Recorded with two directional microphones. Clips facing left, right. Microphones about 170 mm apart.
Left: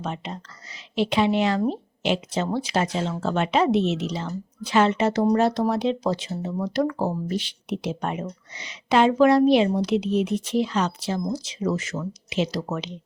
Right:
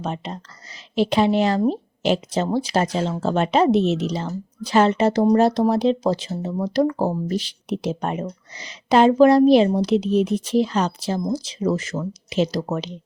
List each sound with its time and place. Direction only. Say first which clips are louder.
0.0 s speech: right 3 dB; 35° right (ahead or behind)